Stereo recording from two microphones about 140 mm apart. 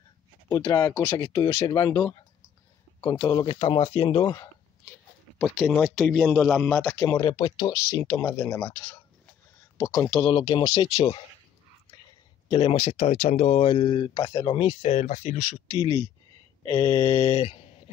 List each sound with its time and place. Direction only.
0.7 s speech: 25° left (ahead or behind)
0.9 s speech: 10° left (ahead or behind)
1.2 s speech: 25° left (ahead or behind)
3.4 s speech: 40° left (ahead or behind)
5.9 s speech: 5° left (ahead or behind)
7.2 s speech: 35° left (ahead or behind)
7.9 s speech: 20° left (ahead or behind)
10.2 s speech: 35° left (ahead or behind)
12.4 s speech: 40° left (ahead or behind)
15.7 s speech: 30° left (ahead or behind)